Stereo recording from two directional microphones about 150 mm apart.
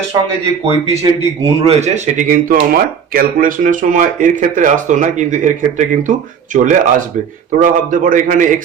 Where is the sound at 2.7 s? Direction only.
70° right (ahead or behind).